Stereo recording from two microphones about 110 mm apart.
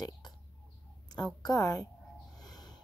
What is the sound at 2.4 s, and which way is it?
Snort, 40° left (ahead or behind).